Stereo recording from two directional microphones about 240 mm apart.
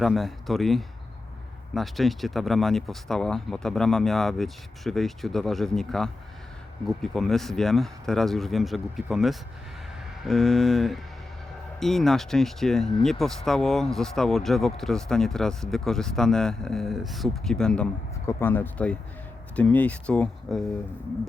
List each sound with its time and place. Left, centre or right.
0.0 s speech: centre